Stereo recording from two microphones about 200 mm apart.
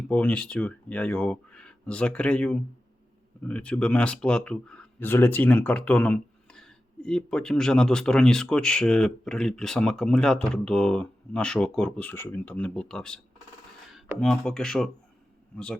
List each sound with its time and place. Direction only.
0.1 s speech: 5° left (ahead or behind)